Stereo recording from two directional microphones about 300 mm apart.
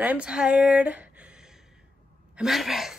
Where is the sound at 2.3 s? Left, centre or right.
Centre.